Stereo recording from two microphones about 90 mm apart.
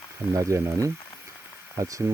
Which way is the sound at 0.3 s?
35° right (ahead or behind).